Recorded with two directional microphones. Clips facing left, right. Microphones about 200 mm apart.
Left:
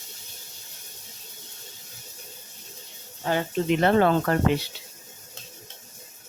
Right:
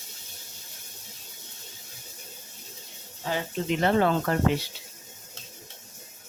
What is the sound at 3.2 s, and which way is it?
Speech, 60° left (ahead or behind).